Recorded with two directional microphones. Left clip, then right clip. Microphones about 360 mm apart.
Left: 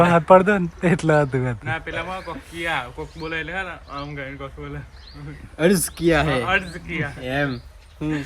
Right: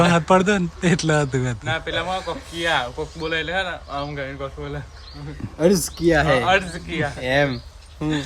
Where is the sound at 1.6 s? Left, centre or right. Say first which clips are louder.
Right 3 dB; right.